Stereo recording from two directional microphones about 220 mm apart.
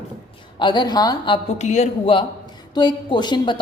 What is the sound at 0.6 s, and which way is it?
A woman's voice, 20° left (ahead or behind).